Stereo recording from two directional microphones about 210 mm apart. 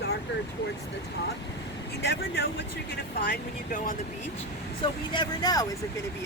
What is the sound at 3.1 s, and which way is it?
Speech, 50° left (ahead or behind).